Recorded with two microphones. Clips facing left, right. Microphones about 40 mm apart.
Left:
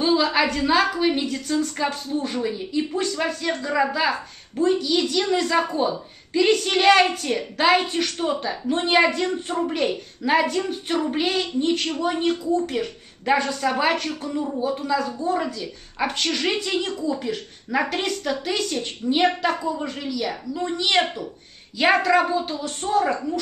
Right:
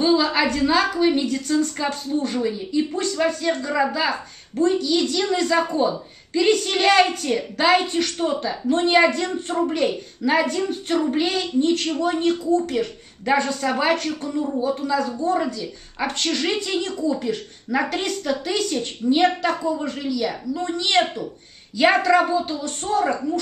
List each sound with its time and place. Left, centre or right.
0.0 s a woman's voice: centre